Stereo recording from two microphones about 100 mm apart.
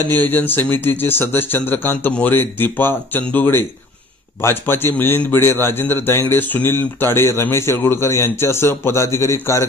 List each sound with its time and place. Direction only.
0.1 s a man's voice: 20° left (ahead or behind)